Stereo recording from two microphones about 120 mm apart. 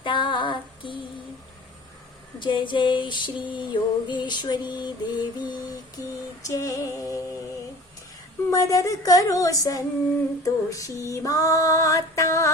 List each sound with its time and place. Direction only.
0.0 s female singing: 45° left (ahead or behind)
2.4 s female singing: 40° left (ahead or behind)
6.5 s female singing: 30° left (ahead or behind)
8.4 s female singing: 25° left (ahead or behind)